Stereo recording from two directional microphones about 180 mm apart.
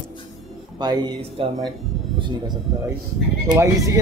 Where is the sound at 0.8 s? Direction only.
25° right (ahead or behind).